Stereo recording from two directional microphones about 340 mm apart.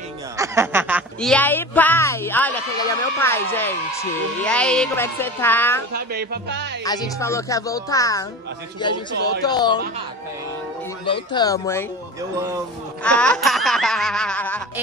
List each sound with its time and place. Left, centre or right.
0.4 s speech: centre
5.9 s speech: right
6.8 s speech: centre
11.1 s speech: centre
13.0 s speech: centre